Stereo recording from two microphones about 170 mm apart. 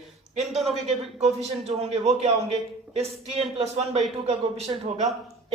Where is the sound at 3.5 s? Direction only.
40° right (ahead or behind).